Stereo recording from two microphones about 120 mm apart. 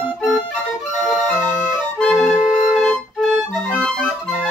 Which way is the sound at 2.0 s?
Centre (ahead or behind).